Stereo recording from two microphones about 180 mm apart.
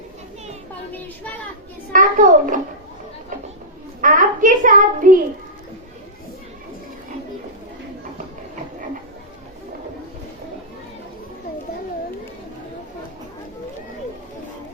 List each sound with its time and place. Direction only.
1.9 s a child's voice: 45° right (ahead or behind)
4.0 s a child's voice: 45° right (ahead or behind)